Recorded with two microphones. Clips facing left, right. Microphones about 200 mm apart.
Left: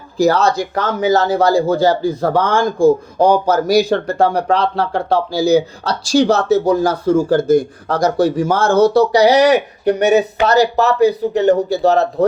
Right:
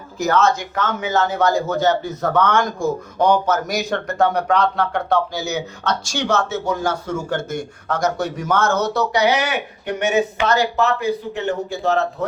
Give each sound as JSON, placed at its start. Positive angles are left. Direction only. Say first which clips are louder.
{"t": 0.2, "sound": "speech", "louder": "left 4 dB", "side_deg": 35}